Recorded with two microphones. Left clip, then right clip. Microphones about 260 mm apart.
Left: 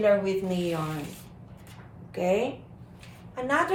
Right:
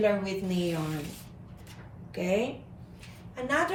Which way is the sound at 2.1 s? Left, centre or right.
Centre.